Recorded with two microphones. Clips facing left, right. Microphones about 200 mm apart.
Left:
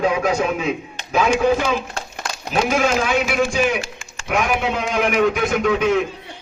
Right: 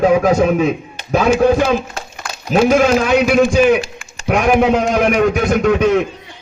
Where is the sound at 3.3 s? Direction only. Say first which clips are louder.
Right 8 dB; 40° right (ahead or behind).